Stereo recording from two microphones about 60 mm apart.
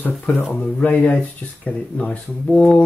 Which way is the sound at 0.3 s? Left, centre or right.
Left.